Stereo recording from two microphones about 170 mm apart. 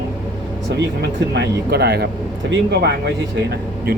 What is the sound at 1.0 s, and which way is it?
Speech, 80° right.